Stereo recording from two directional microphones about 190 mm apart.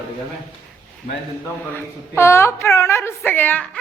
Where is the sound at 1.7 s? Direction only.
15° left (ahead or behind).